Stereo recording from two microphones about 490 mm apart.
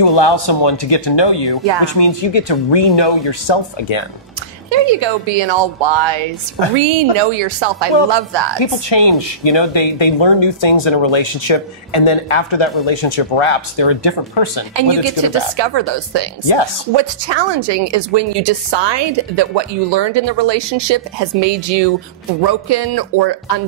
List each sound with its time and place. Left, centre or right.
0.0 s speech: left
4.6 s a woman's voice: right
8.5 s speech: left
14.8 s speech: right